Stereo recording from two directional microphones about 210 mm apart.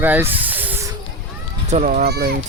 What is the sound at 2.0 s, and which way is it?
Speech, 50° right (ahead or behind).